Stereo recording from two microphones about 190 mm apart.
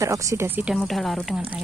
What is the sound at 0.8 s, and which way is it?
Speech, centre (ahead or behind).